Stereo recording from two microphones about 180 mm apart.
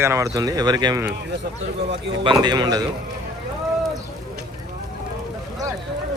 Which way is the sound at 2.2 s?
25° right (ahead or behind).